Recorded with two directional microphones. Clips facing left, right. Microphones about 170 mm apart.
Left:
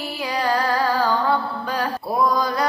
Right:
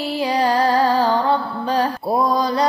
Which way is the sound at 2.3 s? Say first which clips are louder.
Right 3 dB; 30° right (ahead or behind).